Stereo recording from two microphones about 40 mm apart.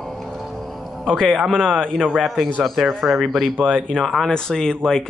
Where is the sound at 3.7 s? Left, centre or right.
Centre.